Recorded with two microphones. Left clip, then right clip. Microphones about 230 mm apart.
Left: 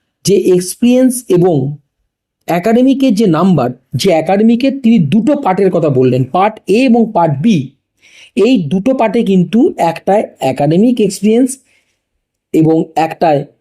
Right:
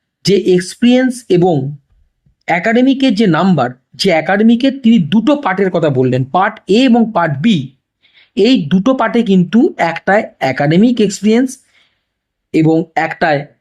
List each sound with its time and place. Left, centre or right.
0.3 s speech: centre
10.8 s speech: right
12.7 s speech: centre